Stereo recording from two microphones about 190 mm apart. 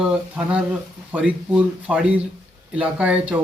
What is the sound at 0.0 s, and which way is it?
Speech, 5° right (ahead or behind).